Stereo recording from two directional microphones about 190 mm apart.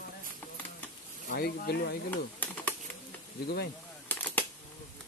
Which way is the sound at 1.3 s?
55° left (ahead or behind).